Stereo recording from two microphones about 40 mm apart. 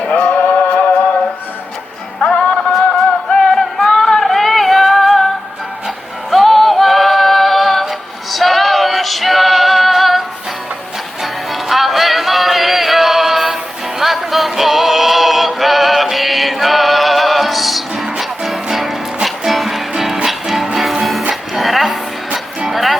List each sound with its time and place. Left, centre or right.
0.1 s music: left
2.2 s music: left
3.2 s music: centre
3.6 s female singing: centre
6.3 s music: centre